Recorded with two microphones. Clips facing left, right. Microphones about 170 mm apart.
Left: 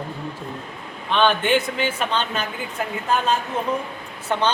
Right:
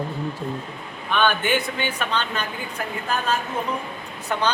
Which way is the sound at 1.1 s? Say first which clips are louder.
Left 2 dB; 30° left (ahead or behind).